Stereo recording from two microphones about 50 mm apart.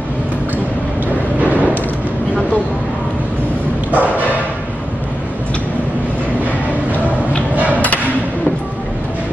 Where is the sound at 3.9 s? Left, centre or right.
Right.